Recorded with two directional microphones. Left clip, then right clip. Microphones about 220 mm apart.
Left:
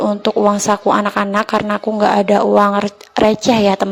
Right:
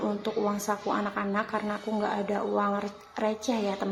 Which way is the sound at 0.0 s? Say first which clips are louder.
Left 15 dB; 35° left (ahead or behind).